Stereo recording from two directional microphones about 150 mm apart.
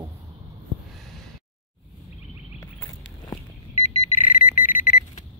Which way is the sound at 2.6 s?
25° left (ahead or behind).